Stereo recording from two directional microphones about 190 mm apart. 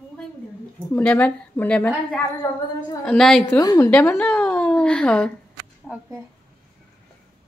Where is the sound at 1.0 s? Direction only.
5° left (ahead or behind).